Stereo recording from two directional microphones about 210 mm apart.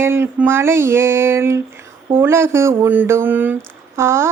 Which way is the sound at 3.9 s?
15° right (ahead or behind).